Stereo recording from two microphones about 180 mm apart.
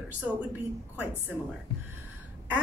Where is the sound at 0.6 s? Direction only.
10° right (ahead or behind).